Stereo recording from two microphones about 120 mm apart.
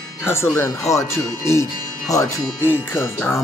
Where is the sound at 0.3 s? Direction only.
20° left (ahead or behind).